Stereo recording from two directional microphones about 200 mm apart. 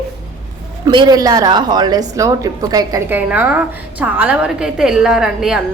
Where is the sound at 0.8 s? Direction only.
20° right (ahead or behind); by 5.6 s 5° right (ahead or behind).